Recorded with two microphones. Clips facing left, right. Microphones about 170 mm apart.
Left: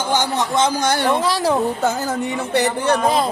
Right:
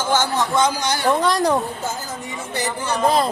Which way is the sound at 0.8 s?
55° left (ahead or behind).